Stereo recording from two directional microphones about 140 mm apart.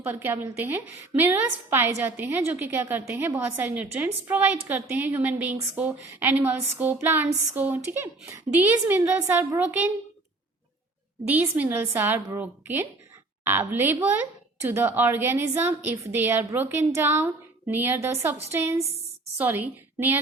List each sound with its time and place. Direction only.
0.0 s a woman's voice: 15° right (ahead or behind)
11.3 s a woman's voice: 10° right (ahead or behind)